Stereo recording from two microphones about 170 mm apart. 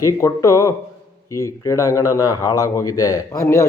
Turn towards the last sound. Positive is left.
turn(degrees=15)  # may be behind; listen again after turning